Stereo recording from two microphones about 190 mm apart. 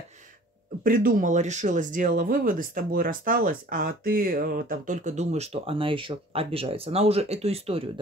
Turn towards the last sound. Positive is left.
turn(degrees=-30)  # may be behind; listen again after turning